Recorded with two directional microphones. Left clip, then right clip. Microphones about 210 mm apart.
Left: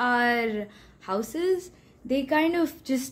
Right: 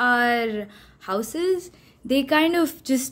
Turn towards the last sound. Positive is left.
turn(degrees=-15)  # may be behind; listen again after turning